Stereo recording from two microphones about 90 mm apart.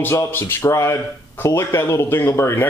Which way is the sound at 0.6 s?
35° left (ahead or behind).